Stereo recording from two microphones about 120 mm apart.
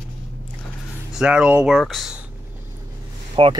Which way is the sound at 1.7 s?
Centre (ahead or behind).